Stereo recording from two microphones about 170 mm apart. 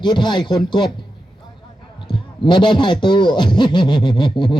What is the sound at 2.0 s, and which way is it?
Speech, 30° left (ahead or behind).